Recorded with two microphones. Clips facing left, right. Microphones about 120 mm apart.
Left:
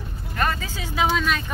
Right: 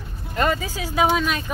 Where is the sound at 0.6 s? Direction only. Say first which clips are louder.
Right 3 dB; 10° right (ahead or behind).